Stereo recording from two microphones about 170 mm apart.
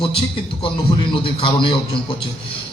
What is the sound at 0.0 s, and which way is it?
A man's voice, 30° left (ahead or behind).